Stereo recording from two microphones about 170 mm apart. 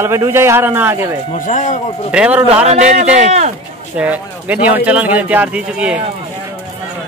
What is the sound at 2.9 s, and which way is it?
Speech, 40° right (ahead or behind).